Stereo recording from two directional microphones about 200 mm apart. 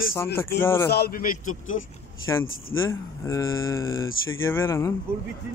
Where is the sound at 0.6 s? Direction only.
10° left (ahead or behind).